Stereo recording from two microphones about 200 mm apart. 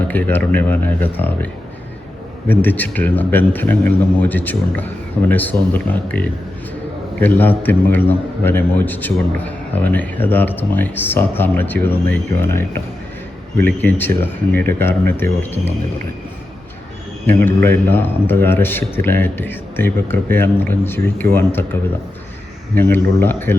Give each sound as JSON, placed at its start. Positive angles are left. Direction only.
{"t": 0.1, "sound": "a man's voice", "side_deg": 10}
{"t": 2.5, "sound": "a man's voice", "side_deg": 10}
{"t": 17.2, "sound": "a man's voice", "side_deg": 10}